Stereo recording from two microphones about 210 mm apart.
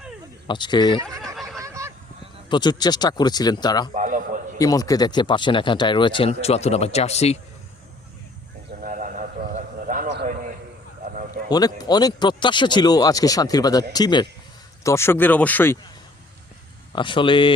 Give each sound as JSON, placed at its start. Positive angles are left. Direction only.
{"t": 0.4, "sound": "speech", "side_deg": 20}
{"t": 1.6, "sound": "honk", "side_deg": -15}
{"t": 2.5, "sound": "speech", "side_deg": 20}
{"t": 3.9, "sound": "a sound", "side_deg": -40}
{"t": 4.5, "sound": "speech", "side_deg": 15}
{"t": 8.8, "sound": "a sound", "side_deg": -40}
{"t": 11.1, "sound": "a sound", "side_deg": -40}
{"t": 11.4, "sound": "speech", "side_deg": 20}
{"t": 16.9, "sound": "speech", "side_deg": 25}